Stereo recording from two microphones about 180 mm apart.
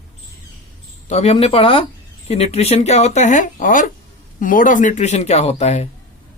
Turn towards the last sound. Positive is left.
turn(degrees=35)  # may be behind; listen again after turning